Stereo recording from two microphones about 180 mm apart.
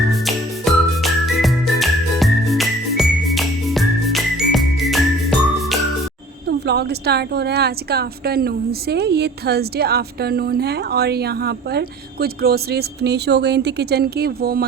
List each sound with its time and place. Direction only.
0.1 s music: centre (ahead or behind)
6.5 s a woman's voice: 65° right (ahead or behind)